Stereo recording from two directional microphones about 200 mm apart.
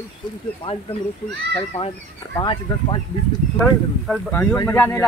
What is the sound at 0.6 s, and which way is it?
Speech, 25° left (ahead or behind).